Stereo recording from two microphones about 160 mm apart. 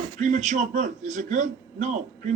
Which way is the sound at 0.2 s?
50° right (ahead or behind).